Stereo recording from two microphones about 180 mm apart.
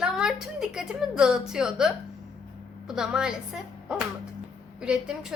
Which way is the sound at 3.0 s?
5° right (ahead or behind).